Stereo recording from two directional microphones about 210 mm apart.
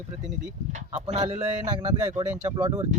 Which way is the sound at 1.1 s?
35° right (ahead or behind).